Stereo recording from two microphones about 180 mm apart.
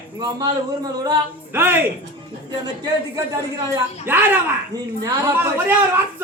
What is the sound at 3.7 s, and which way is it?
Speech, 10° right (ahead or behind).